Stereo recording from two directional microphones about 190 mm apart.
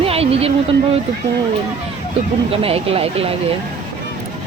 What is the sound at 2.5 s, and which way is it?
Speech, 30° right (ahead or behind).